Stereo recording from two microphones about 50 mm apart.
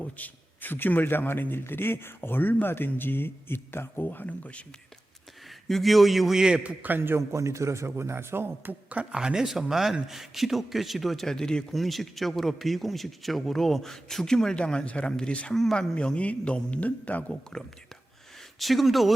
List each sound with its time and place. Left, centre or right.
0.0 s a man's voice: left
5.6 s speech: centre
6.6 s a man's voice: right
6.9 s a man's voice: right
7.2 s a man's voice: right
9.1 s speech: centre
11.7 s speech: centre; by 15.5 s left
15.5 s speech: centre; by 17.3 s left
18.6 s speech: centre